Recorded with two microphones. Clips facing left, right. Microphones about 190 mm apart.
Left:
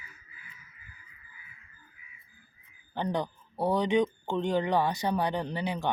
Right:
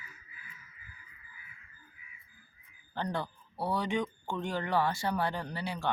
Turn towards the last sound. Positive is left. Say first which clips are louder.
# left 3 dB
turn(degrees=20)  # may be behind; listen again after turning